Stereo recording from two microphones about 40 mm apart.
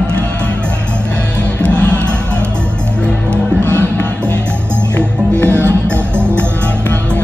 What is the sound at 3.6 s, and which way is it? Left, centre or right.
Music, left.